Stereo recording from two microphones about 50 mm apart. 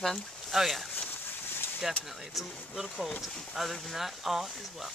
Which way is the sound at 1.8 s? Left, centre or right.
Centre.